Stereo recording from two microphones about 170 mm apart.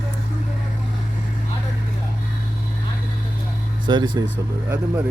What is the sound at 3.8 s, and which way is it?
Speech, 25° right (ahead or behind).